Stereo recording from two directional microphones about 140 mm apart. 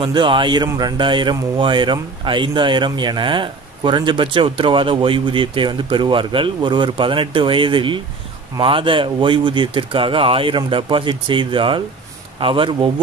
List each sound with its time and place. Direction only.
0.0 s a man's voice: 35° right (ahead or behind)